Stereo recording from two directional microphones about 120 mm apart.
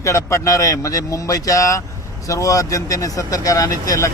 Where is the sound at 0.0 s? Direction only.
25° left (ahead or behind).